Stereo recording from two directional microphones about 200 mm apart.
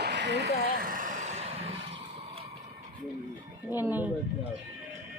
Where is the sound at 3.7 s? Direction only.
10° right (ahead or behind).